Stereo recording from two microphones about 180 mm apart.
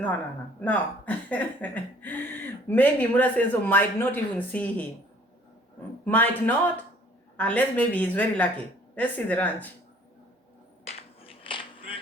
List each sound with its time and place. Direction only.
0.6 s speech: 10° left (ahead or behind)
6.1 s speech: 10° left (ahead or behind)
10.8 s a sound: 30° left (ahead or behind)